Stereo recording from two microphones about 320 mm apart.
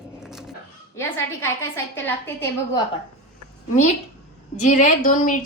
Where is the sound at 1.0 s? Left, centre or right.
Centre.